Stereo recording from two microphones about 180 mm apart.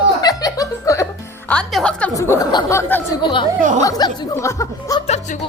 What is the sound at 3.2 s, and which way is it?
Speech, 25° left (ahead or behind).